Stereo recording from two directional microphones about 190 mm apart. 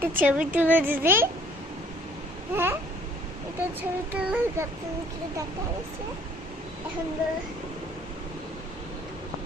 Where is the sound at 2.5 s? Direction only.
10° right (ahead or behind).